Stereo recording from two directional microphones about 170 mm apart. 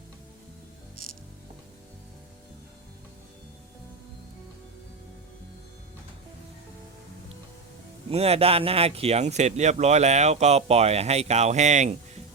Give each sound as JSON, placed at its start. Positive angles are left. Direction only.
{"t": 8.1, "sound": "speech", "side_deg": -35}